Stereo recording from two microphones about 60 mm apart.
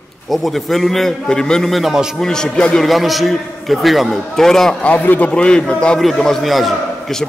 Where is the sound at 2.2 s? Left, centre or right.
Centre.